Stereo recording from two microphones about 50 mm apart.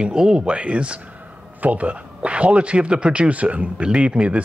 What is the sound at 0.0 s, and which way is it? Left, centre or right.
Speech, centre.